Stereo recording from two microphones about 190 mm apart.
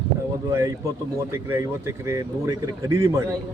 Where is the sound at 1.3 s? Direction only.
15° right (ahead or behind).